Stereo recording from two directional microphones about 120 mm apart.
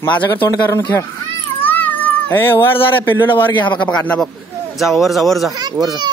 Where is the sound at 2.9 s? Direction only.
15° left (ahead or behind); by 5.5 s centre (ahead or behind).